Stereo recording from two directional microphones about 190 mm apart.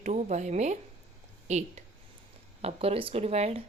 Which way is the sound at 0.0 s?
35° right (ahead or behind).